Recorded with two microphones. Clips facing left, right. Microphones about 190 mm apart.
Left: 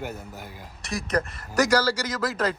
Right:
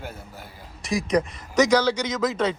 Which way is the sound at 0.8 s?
Centre (ahead or behind).